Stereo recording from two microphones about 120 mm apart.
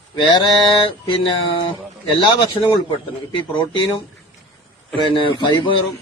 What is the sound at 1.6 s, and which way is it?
Speech, 45° left (ahead or behind).